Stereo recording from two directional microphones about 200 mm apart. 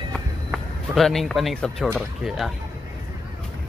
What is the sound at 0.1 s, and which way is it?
Speech, centre (ahead or behind).